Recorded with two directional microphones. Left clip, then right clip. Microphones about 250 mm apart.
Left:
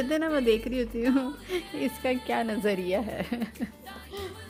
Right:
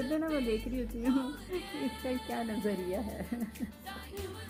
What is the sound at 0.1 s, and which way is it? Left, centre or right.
Speech, left.